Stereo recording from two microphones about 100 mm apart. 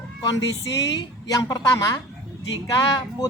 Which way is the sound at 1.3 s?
35° left (ahead or behind).